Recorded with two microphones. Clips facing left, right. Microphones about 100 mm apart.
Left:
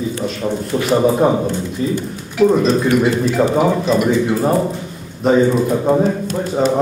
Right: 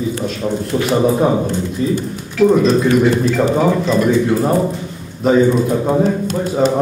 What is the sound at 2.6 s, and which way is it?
Speech, 5° left (ahead or behind).